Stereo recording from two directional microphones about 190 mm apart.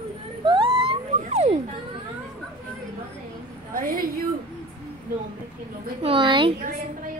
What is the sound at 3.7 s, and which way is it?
Speech, 50° right (ahead or behind).